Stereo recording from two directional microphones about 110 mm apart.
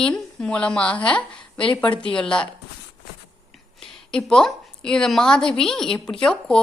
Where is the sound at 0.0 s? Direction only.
10° left (ahead or behind).